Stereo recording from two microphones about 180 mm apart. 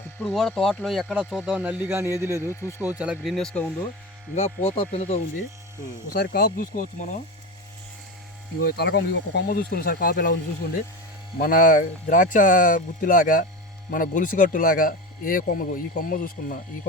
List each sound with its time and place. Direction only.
0.2 s speech: 5° left (ahead or behind); by 2.1 s 15° right (ahead or behind)
2.4 s speech: 15° left (ahead or behind)
3.0 s speech: 5° right (ahead or behind)
4.4 s speech: 40° left (ahead or behind)
6.1 s speech: 55° left (ahead or behind)
8.6 s speech: 65° left (ahead or behind)
11.3 s speech: 50° left (ahead or behind)